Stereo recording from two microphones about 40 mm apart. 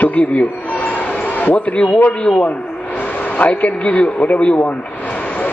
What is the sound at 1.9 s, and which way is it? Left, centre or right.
Speech, left.